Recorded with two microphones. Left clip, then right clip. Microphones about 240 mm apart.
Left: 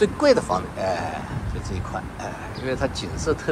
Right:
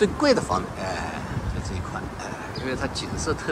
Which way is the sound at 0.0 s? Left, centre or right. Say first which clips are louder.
Left 2 dB; centre.